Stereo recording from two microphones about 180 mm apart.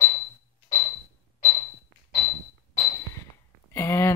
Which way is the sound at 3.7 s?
15° left (ahead or behind).